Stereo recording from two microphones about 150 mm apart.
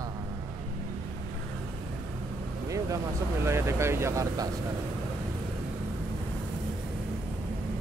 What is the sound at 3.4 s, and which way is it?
Speech, 20° right (ahead or behind).